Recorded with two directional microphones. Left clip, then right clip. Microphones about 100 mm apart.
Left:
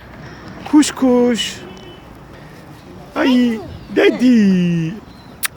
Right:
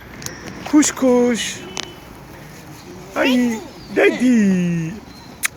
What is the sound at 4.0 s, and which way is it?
Speech, 80° left.